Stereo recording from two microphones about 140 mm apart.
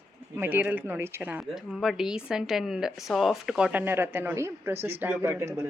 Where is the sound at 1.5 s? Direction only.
Centre (ahead or behind).